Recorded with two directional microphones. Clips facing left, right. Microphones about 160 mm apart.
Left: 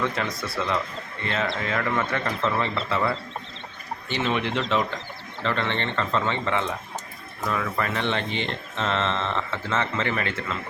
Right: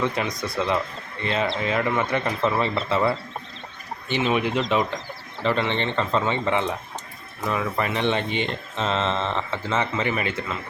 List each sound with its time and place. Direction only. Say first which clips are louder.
0.0 s speech: right 2 dB; 15° right (ahead or behind)
4.1 s speech: right 3 dB; 15° right (ahead or behind)